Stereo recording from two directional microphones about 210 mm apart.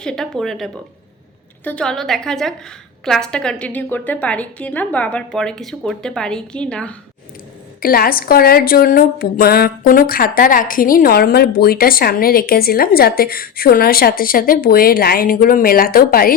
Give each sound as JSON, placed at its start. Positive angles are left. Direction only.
{"t": 0.0, "sound": "a woman's voice", "side_deg": 5}
{"t": 7.8, "sound": "a woman's voice", "side_deg": 45}